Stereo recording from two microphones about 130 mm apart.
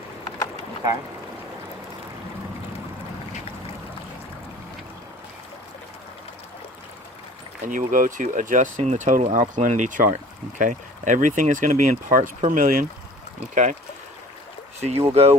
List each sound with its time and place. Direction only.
7.7 s speech: 90° right
13.5 s speech: 70° right (ahead or behind)
14.8 s speech: 55° right (ahead or behind)